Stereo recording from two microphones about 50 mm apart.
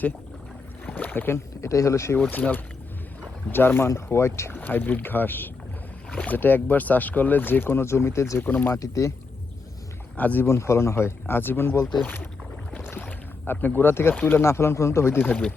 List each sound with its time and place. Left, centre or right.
0.9 s boat: left
1.6 s speech: left
2.3 s speech: left
3.8 s speech: left
4.6 s speech: left
6.1 s speech: left
8.4 s speech: left
8.7 s speech: left
10.2 s speech: left
10.4 s speech: left
12.8 s rowboat: left
13.1 s speech: left
14.4 s speech: left